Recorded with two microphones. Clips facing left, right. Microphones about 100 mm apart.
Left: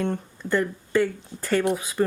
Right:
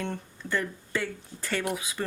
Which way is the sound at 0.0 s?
40° left (ahead or behind).